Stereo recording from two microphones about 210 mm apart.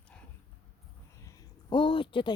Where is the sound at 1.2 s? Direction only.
15° left (ahead or behind).